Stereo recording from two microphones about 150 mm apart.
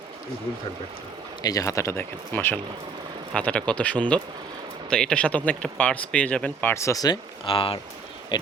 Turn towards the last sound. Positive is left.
turn(degrees=35)  # may be behind; listen again after turning